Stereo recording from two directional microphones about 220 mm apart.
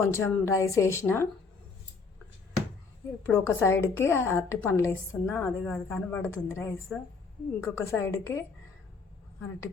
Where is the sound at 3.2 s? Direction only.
10° left (ahead or behind).